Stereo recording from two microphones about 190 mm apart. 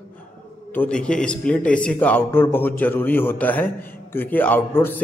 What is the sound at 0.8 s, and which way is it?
A man's voice, 5° left (ahead or behind).